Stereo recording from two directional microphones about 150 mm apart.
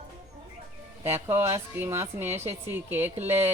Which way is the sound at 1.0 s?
15° right (ahead or behind).